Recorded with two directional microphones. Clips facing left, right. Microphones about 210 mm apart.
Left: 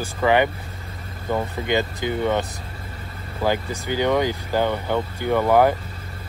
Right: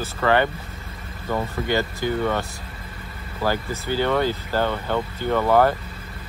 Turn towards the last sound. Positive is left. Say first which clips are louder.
# left 1 dB
turn(degrees=15)  # may be behind; listen again after turning